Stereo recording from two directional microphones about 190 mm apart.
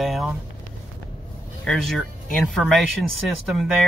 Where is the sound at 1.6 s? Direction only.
Centre (ahead or behind).